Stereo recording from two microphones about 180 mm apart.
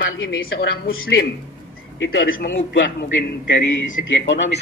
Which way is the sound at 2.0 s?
90° left.